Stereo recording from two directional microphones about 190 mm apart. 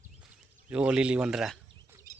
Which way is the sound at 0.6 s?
5° right (ahead or behind).